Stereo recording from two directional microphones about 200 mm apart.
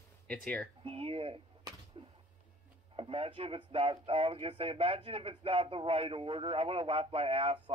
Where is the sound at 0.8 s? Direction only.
30° right (ahead or behind).